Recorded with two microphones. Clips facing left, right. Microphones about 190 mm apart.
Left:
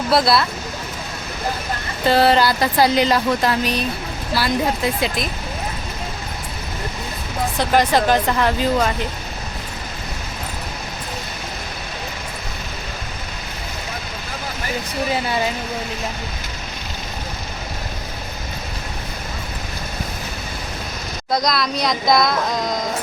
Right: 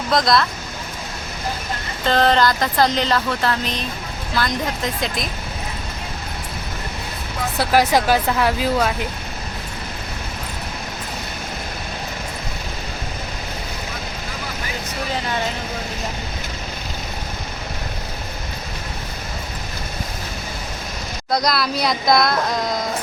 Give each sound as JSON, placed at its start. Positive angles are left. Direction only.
{"t": 0.1, "sound": "speech", "side_deg": 5}
{"t": 2.0, "sound": "speech", "side_deg": 10}
{"t": 7.6, "sound": "speech", "side_deg": -5}
{"t": 21.2, "sound": "speech", "side_deg": 0}